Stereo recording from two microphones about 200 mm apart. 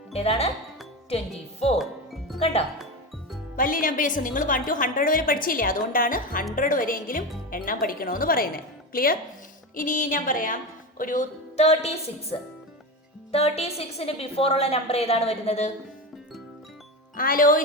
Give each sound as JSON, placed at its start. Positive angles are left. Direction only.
{"t": 0.1, "sound": "speech", "side_deg": 30}
{"t": 1.8, "sound": "music", "side_deg": 0}
{"t": 2.4, "sound": "speech", "side_deg": 30}
{"t": 3.5, "sound": "a woman's voice", "side_deg": 45}
{"t": 17.2, "sound": "a woman's voice", "side_deg": 45}